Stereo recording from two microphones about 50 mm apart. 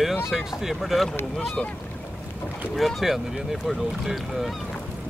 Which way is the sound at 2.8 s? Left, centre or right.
Centre.